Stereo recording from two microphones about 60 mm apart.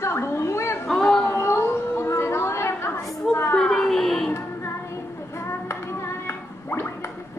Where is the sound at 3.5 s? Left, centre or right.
Centre.